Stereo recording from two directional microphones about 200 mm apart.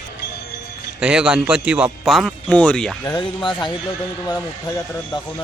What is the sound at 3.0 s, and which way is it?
Speech, 20° left (ahead or behind).